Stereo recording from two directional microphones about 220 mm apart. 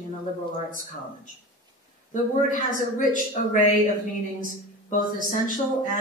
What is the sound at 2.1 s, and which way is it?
A woman's voice, 35° left (ahead or behind).